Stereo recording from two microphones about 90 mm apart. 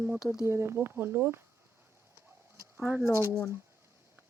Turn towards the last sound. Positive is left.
turn(degrees=-30)  # may be behind; listen again after turning